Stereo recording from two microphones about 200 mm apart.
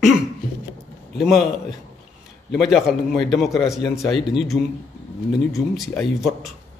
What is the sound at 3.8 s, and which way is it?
Speech, 20° left (ahead or behind).